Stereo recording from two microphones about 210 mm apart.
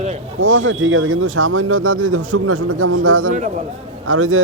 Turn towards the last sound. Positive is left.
turn(degrees=-75)  # may be behind; listen again after turning